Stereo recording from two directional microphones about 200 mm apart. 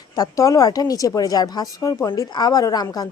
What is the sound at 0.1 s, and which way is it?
A woman's voice, 15° left (ahead or behind).